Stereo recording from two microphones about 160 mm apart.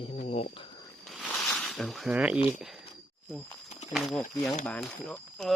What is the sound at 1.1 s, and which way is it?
Zipper, centre (ahead or behind).